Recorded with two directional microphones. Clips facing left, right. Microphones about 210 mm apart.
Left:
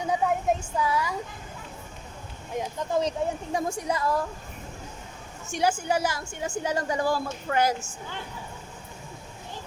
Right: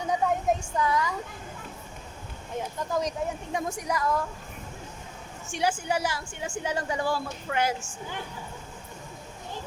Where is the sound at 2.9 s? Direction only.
30° left (ahead or behind).